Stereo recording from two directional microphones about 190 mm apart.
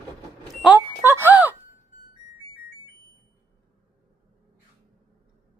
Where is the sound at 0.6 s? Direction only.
10° right (ahead or behind).